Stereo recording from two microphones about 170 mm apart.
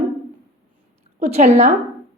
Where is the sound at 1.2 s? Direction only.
40° right (ahead or behind).